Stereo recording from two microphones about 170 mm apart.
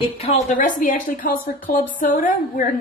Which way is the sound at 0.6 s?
50° left (ahead or behind).